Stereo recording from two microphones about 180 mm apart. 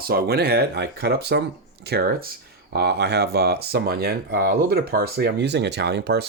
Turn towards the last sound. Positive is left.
turn(degrees=-65)  # may be behind; listen again after turning